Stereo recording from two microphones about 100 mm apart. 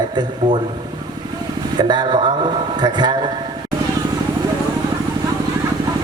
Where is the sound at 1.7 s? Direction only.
45° right (ahead or behind).